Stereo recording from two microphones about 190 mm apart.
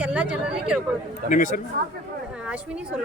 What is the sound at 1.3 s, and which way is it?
Speech, 40° left (ahead or behind).